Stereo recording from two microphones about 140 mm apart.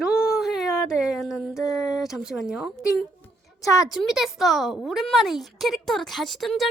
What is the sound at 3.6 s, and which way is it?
Speech, 25° left (ahead or behind).